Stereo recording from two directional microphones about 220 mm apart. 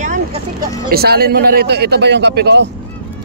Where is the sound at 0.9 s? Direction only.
45° right (ahead or behind).